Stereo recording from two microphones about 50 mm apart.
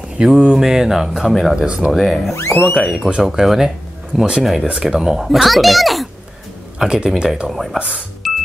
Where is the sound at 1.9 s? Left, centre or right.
Centre.